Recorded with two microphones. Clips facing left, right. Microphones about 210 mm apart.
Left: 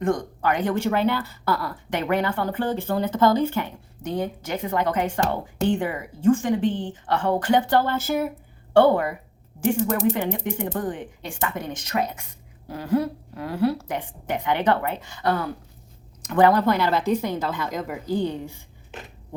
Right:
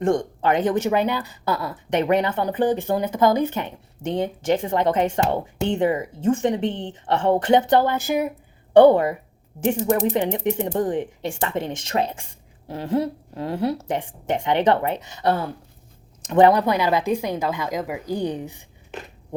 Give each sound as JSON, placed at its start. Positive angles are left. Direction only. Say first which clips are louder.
{"t": 0.0, "sound": "speech", "louder": "right 3 dB", "side_deg": -25}
{"t": 10.3, "sound": "speech", "louder": "right 5 dB", "side_deg": -20}